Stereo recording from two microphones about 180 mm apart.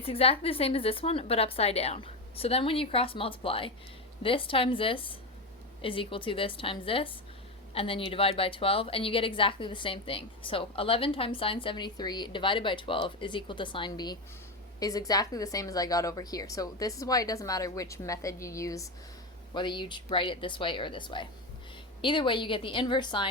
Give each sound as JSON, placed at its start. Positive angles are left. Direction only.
{"t": 0.0, "sound": "a woman's voice", "side_deg": 30}